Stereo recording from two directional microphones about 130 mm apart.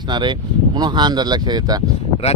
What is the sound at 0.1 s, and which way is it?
Speech, 35° right (ahead or behind).